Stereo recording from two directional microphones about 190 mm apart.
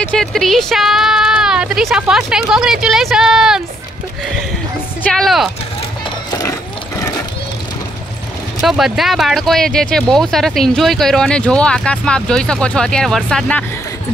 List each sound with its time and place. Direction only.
0.0 s speech: 5° left (ahead or behind)
5.1 s speech: centre (ahead or behind)
6.0 s music: 20° left (ahead or behind)
8.5 s speech: centre (ahead or behind)